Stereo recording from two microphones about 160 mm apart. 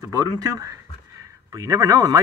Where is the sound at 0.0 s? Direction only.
20° right (ahead or behind).